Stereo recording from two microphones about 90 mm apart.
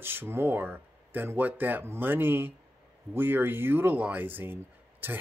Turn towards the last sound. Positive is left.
turn(degrees=-25)  # may be behind; listen again after turning